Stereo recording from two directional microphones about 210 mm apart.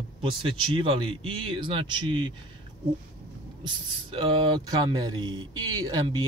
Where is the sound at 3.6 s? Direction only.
25° right (ahead or behind).